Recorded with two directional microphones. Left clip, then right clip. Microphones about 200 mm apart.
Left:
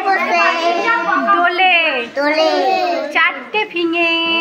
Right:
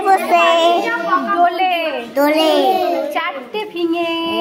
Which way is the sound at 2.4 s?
65° right (ahead or behind).